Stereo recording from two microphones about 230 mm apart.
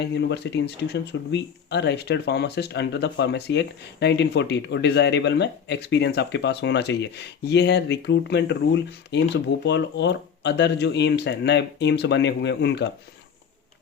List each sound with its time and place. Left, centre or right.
0.0 s speech: left